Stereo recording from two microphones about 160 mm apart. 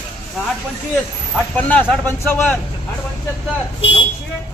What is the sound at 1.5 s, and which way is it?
Speech, 10° left (ahead or behind).